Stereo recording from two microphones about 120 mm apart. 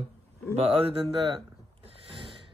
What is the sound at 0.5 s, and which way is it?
Speech, 55° right (ahead or behind).